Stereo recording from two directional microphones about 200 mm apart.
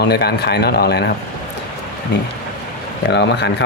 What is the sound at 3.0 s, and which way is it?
Speech, 60° left (ahead or behind).